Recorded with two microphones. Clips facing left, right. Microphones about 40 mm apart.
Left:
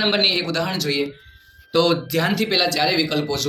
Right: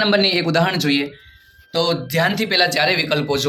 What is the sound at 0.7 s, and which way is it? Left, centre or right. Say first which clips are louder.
Speech: right 4 dB; right.